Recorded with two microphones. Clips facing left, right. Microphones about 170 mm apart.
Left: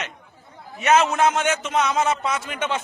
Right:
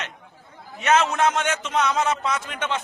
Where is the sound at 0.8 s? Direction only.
10° left (ahead or behind).